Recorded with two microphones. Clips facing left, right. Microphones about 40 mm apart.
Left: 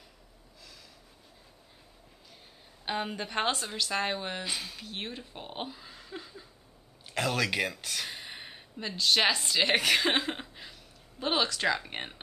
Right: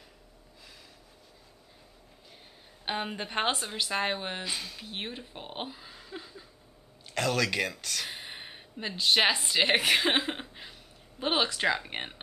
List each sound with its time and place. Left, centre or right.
2.8 s a woman's voice: centre
4.5 s speech: centre
4.8 s speech: centre
8.1 s a sound: centre
8.9 s a woman's voice: centre